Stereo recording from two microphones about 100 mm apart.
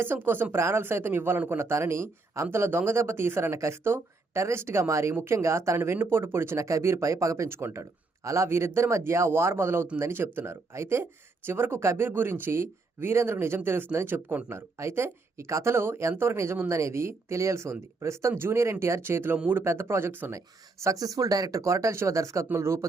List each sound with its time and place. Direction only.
0.0 s speech: 20° right (ahead or behind)
20.8 s speech: 35° right (ahead or behind)